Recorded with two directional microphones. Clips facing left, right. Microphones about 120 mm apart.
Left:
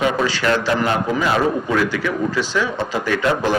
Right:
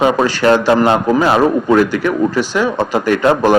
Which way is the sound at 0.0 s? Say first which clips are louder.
Right 6 dB; 45° right (ahead or behind).